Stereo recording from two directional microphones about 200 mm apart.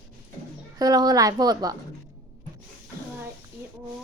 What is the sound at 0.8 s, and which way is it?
Speech, 20° right (ahead or behind).